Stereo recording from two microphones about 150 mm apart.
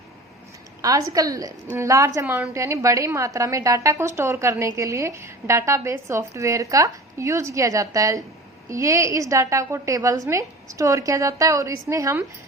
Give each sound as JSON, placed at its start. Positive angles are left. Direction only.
{"t": 0.8, "sound": "a woman's voice", "side_deg": -25}